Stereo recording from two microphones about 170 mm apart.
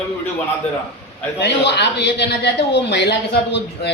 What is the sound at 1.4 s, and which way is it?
Speech, 85° left.